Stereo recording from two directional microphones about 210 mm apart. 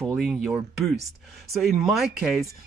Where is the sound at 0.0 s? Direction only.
5° right (ahead or behind).